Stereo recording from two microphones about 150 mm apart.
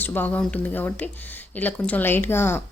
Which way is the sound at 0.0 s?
10° left (ahead or behind).